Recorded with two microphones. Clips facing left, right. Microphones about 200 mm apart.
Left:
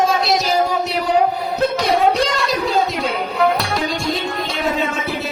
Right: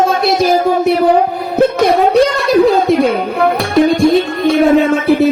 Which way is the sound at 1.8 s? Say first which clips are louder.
Right 6 dB; 55° right (ahead or behind).